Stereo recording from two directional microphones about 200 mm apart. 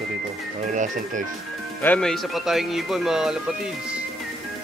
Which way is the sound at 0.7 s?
40° right (ahead or behind).